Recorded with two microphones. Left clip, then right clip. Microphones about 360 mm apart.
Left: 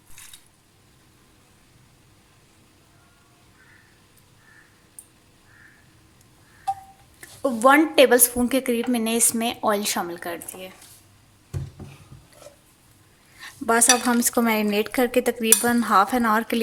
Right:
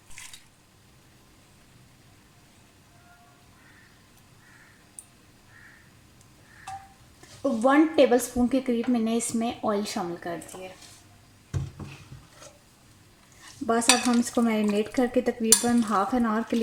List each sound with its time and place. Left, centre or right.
7.6 s dishes: left
13.7 s dishes: left